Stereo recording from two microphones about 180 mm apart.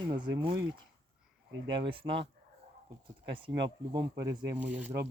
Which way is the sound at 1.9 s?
30° right (ahead or behind).